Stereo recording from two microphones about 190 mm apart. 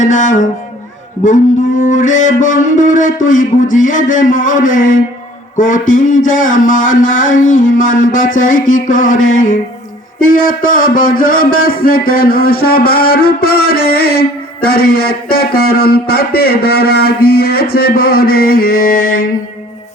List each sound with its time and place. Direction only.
0.0 s speech: 40° left (ahead or behind)
1.2 s a sound: 40° left (ahead or behind)
11.6 s music: 50° left (ahead or behind)